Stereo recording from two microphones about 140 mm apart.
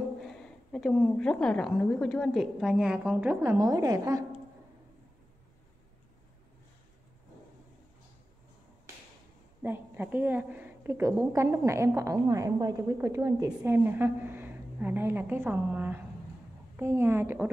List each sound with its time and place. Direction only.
0.3 s a woman's voice: 5° left (ahead or behind); by 4.2 s 25° right (ahead or behind)
9.6 s a woman's voice: 15° right (ahead or behind)